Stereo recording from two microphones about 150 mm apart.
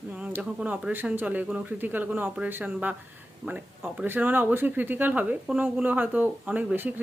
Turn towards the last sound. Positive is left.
turn(degrees=-10)  # may be behind; listen again after turning